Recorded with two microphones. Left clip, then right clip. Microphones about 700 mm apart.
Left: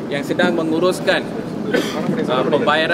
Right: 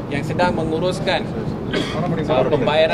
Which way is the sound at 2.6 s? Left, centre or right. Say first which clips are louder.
Even; right.